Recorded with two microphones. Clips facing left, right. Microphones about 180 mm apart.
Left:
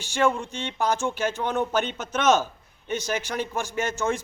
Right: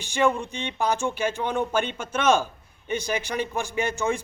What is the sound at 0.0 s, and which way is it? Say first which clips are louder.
A man's voice: right 1 dB; 15° right (ahead or behind).